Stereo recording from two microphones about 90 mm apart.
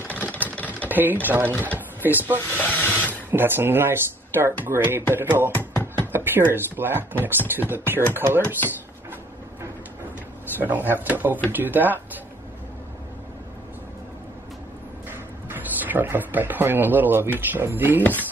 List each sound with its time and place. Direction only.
0.1 s a sound: 15° left (ahead or behind)
0.6 s typing: 15° left (ahead or behind)
0.8 s speech: 20° right (ahead or behind)
2.5 s speech: 20° left (ahead or behind)
3.3 s speech: 25° right (ahead or behind)
5.5 s music: 20° left (ahead or behind)
6.1 s speech: 25° right (ahead or behind)
10.6 s speech: 20° right (ahead or behind)
15.0 s speech: 25° right (ahead or behind)